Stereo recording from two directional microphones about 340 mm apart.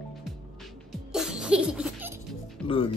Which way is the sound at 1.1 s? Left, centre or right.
Centre.